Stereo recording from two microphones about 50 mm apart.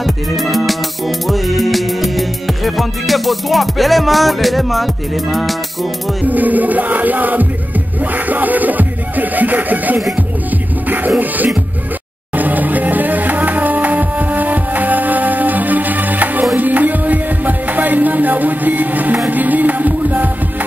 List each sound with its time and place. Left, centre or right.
0.0 s music: centre
6.2 s music: right